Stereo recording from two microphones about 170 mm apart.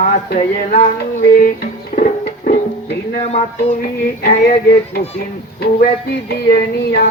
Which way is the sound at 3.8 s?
60° left (ahead or behind).